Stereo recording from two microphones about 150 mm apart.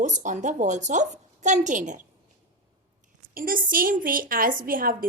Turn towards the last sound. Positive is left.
turn(degrees=-70)  # may be behind; listen again after turning